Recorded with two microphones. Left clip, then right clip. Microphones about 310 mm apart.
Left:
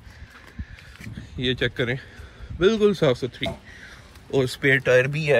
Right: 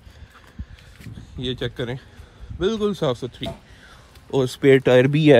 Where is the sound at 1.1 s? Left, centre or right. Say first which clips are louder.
Left 3 dB; centre.